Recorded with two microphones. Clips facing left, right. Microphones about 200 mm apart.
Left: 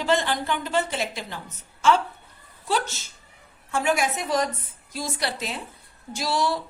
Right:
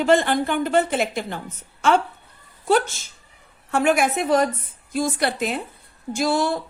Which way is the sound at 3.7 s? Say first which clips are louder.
Right 5 dB; 60° right (ahead or behind).